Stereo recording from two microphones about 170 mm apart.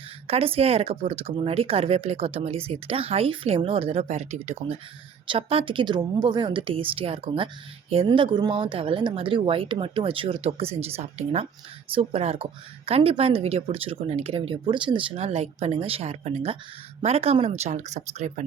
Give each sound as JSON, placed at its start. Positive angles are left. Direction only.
{"t": 0.3, "sound": "a woman's voice", "side_deg": -35}